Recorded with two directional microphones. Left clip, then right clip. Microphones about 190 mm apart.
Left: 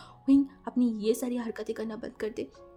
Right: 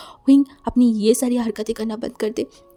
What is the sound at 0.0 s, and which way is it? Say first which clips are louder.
A woman's voice: right 9 dB; 50° right (ahead or behind).